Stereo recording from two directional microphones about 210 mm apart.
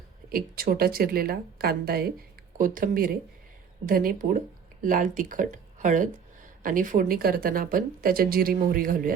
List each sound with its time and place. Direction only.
0.3 s speech: 45° right (ahead or behind)